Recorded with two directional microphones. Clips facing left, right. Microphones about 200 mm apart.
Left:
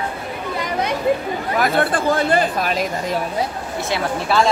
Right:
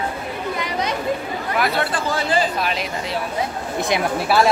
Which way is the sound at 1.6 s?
50° left (ahead or behind).